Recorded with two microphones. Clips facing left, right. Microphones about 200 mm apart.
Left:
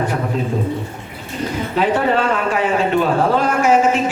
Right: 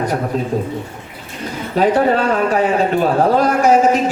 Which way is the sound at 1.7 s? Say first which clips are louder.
Right 4 dB; 40° right (ahead or behind).